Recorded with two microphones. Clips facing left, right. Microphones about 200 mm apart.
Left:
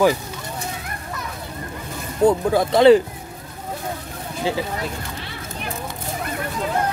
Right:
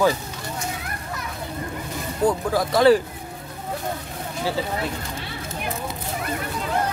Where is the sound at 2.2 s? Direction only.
25° left (ahead or behind).